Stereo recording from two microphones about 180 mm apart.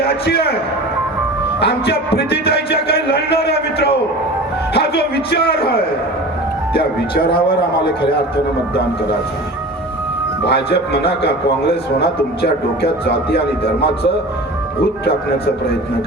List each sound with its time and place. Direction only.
0.3 s speech: 60° left (ahead or behind)
1.6 s speech: 65° left (ahead or behind)
10.4 s speech: 65° left (ahead or behind)